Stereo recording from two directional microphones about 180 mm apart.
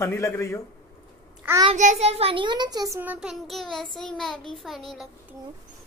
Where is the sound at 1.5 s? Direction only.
10° right (ahead or behind).